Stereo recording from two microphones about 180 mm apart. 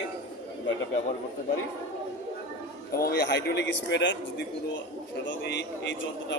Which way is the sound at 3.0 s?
65° left (ahead or behind).